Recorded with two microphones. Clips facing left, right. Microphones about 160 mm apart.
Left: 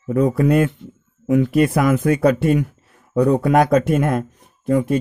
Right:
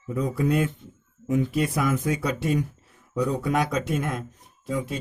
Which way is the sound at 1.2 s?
75° left (ahead or behind).